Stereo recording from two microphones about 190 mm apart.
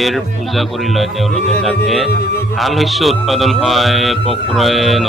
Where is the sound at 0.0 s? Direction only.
Centre (ahead or behind).